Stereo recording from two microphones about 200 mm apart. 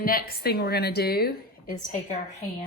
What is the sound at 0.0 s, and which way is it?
A woman's voice, 45° left (ahead or behind).